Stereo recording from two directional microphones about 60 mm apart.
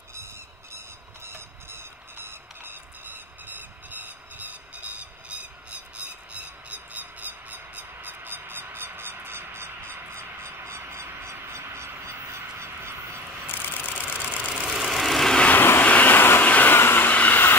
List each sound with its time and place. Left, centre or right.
1.2 s a sound: right
11.3 s a sound: right
12.0 s duck: right
13.5 s vehicle: left
14.0 s vehicle: right; by 15.3 s centre
15.5 s vehicle: left
15.8 s vehicle: left
16.7 s vehicle: left
17.1 s train: left